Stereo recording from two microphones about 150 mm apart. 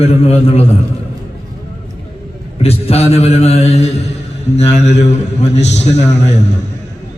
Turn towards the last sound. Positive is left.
turn(degrees=50)  # may be behind; listen again after turning